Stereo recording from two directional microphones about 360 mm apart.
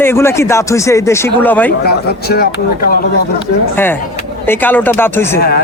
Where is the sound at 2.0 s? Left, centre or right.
Left.